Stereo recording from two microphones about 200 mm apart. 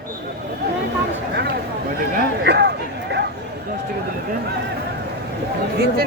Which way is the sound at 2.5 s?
55° right (ahead or behind).